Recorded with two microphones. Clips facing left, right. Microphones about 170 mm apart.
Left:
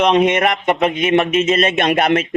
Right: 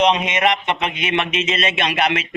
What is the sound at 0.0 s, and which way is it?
Speech, 55° left (ahead or behind).